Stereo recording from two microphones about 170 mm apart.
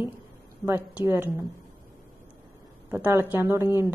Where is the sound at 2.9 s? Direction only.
15° right (ahead or behind).